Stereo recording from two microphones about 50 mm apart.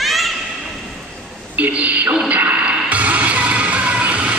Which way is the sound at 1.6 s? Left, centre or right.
Right.